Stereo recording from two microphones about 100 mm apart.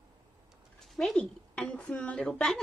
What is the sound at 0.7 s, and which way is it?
Speech, centre (ahead or behind).